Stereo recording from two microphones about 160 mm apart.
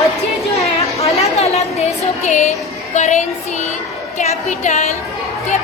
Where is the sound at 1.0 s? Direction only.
40° left (ahead or behind).